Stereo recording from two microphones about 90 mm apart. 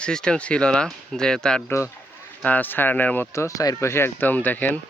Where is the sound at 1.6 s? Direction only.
30° left (ahead or behind).